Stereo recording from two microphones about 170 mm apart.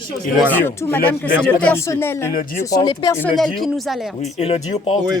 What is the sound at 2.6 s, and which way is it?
Speech, 20° left (ahead or behind).